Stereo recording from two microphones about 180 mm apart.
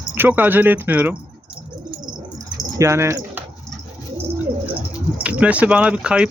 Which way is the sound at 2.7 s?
15° right (ahead or behind).